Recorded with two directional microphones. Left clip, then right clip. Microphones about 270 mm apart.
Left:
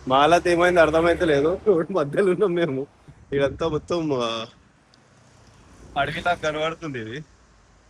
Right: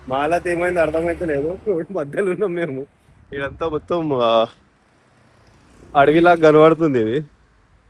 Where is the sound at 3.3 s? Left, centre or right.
Centre.